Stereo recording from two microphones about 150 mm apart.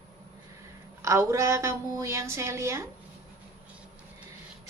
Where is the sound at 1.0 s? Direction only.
20° right (ahead or behind).